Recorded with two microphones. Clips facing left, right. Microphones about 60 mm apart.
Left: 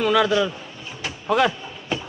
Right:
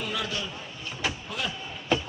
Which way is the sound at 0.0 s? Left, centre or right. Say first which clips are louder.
Left 14 dB; left.